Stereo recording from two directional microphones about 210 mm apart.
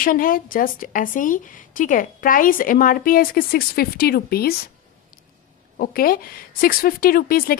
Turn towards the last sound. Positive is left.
turn(degrees=45)  # may be behind; listen again after turning